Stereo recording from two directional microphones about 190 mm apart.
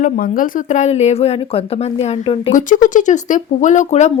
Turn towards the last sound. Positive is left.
turn(degrees=35)  # may be behind; listen again after turning